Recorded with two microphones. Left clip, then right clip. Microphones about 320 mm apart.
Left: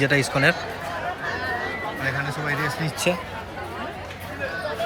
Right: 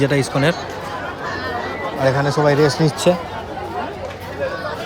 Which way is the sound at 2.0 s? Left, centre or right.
Centre.